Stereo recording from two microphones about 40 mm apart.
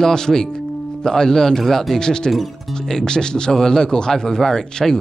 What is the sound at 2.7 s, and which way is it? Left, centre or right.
Speech, centre.